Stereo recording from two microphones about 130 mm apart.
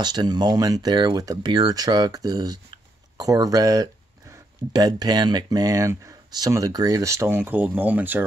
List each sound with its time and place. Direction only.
0.0 s speech: 35° right (ahead or behind); by 8.2 s 15° right (ahead or behind)